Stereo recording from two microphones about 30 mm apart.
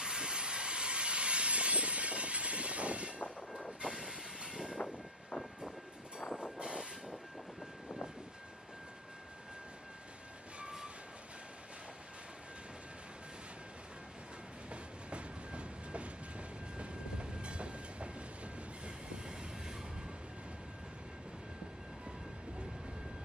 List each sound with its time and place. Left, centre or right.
0.0 s train: right
3.8 s train: centre
4.1 s vehicle: right
4.8 s vehicle: left
6.3 s vehicle: right
14.7 s train: right
19.1 s train: right